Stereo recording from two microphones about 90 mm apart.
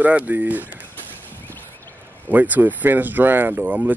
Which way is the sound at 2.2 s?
20° right (ahead or behind).